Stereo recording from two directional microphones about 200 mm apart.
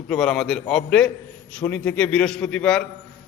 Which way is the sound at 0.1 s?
Centre (ahead or behind).